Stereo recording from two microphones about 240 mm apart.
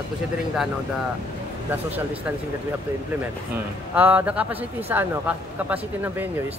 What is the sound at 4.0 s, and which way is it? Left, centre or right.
Speech, centre.